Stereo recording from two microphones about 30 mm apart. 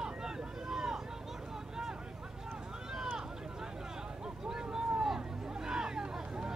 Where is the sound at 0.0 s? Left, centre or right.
Right.